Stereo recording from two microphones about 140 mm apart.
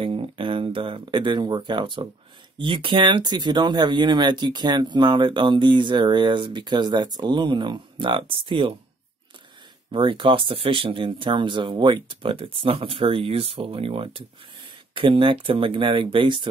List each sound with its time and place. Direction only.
0.0 s speech: 40° right (ahead or behind)
9.8 s speech: 35° right (ahead or behind)